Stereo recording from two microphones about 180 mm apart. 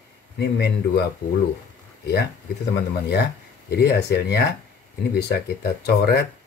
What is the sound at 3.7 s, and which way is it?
Speech, 65° left (ahead or behind).